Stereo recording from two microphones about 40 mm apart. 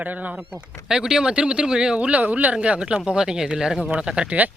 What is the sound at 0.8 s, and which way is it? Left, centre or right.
Speech, centre.